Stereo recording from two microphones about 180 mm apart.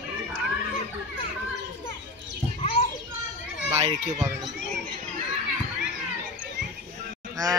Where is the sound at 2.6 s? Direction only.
35° left (ahead or behind).